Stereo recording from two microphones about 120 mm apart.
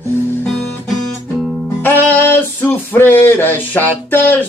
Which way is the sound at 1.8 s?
15° left (ahead or behind).